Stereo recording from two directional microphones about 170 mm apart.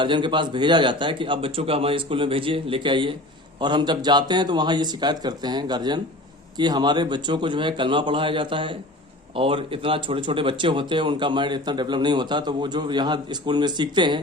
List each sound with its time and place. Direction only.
0.0 s speech: 30° right (ahead or behind)